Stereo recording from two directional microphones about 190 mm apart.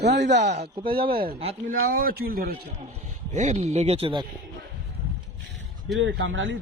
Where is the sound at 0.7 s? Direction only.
25° right (ahead or behind).